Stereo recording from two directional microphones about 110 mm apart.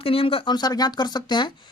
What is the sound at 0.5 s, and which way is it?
Speech, 40° left (ahead or behind).